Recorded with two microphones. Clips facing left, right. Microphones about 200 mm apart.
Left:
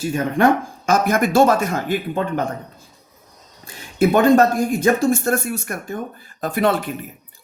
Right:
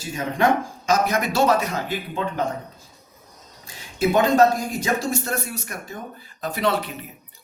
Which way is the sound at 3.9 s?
60° left (ahead or behind).